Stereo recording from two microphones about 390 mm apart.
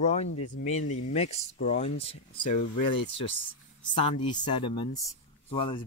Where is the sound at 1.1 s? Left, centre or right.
Centre.